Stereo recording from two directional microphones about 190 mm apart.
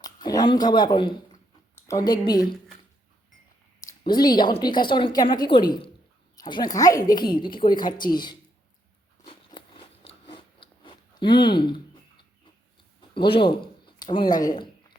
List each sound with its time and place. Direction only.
0.0 s speech: 20° left (ahead or behind)
4.0 s a woman's voice: 20° left (ahead or behind)
9.2 s biting: 25° left (ahead or behind)
13.0 s speech: 25° left (ahead or behind)